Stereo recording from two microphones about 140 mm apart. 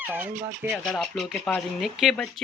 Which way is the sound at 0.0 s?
10° right (ahead or behind).